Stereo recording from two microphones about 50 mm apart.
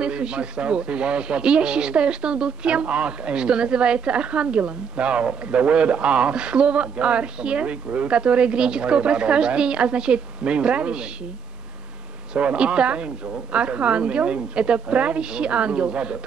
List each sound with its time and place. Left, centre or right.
0.0 s speech: centre
12.4 s speech: right